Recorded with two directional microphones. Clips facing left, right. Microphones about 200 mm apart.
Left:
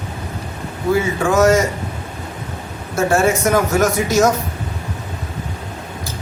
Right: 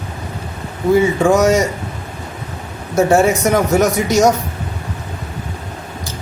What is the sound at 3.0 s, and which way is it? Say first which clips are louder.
Speech: right 3 dB; 15° right (ahead or behind).